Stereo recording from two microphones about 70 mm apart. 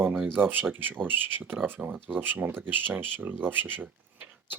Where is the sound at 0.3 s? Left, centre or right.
Right.